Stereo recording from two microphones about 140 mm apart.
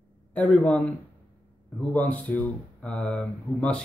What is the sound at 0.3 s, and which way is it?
Speech, 10° left (ahead or behind).